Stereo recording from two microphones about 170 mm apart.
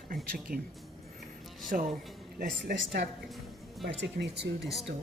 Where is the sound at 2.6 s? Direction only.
85° right.